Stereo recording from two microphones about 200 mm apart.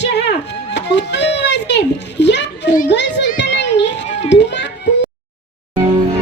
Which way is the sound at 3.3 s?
60° left (ahead or behind).